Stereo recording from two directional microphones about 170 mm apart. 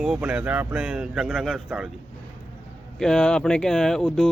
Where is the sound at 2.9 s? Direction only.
5° left (ahead or behind).